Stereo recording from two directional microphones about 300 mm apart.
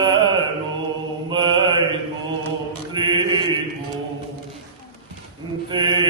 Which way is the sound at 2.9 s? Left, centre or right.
Centre.